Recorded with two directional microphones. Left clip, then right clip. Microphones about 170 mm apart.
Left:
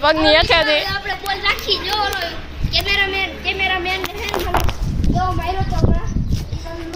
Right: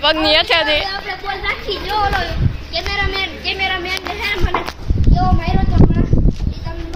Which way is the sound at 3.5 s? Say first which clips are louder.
Left 1 dB; 25° right (ahead or behind).